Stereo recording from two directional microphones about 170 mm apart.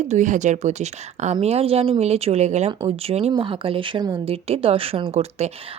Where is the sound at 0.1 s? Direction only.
45° right (ahead or behind).